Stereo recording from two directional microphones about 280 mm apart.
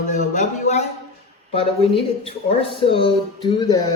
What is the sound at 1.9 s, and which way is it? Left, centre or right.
Speech, centre.